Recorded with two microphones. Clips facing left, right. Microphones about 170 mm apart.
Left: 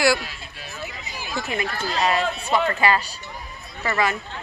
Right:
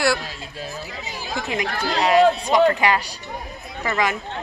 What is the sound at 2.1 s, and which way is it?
Speech, 15° right (ahead or behind).